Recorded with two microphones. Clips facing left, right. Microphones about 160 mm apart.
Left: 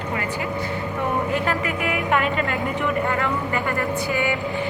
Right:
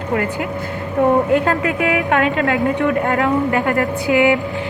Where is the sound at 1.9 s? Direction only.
80° right.